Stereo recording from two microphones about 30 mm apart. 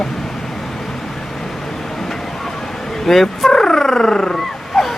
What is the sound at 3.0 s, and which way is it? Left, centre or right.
Speech, centre.